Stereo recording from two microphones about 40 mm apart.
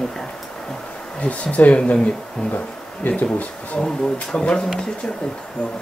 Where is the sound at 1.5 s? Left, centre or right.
Left.